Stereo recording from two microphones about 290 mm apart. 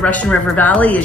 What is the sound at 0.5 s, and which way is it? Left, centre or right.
Speech, centre.